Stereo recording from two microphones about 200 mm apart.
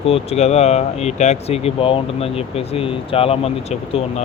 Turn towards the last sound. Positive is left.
turn(degrees=30)  # may be behind; listen again after turning